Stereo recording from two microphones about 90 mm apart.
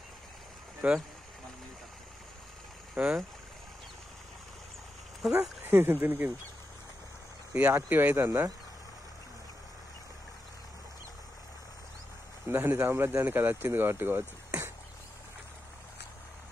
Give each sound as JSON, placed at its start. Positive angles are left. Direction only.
{"t": 0.8, "sound": "speech", "side_deg": -15}
{"t": 3.0, "sound": "speech", "side_deg": -10}
{"t": 5.2, "sound": "speech", "side_deg": -5}
{"t": 5.6, "sound": "speech", "side_deg": -25}
{"t": 7.5, "sound": "speech", "side_deg": -20}
{"t": 12.4, "sound": "speech", "side_deg": -25}